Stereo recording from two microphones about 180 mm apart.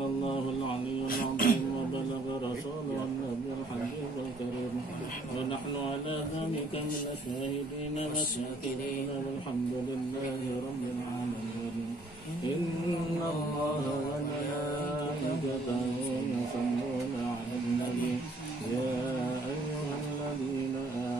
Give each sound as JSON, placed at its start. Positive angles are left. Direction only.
{"t": 1.0, "sound": "beatboxing", "side_deg": 55}